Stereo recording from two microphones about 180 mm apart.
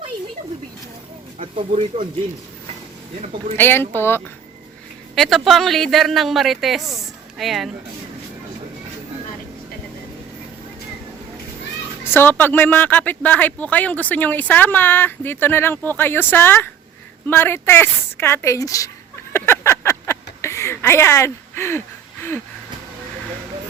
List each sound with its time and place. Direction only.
1.4 s speech: 30° right (ahead or behind)
3.5 s speech: 10° left (ahead or behind)
5.1 s a man's voice: centre (ahead or behind)
12.0 s speech: 10° left (ahead or behind)
19.3 s a sound: 15° left (ahead or behind)